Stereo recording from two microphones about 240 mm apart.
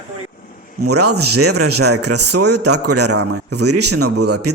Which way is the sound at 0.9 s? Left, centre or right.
Right.